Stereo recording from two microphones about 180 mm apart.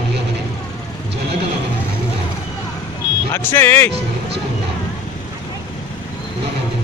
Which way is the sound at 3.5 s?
10° left (ahead or behind).